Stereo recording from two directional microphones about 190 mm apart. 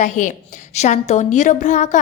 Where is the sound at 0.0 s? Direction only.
40° left (ahead or behind).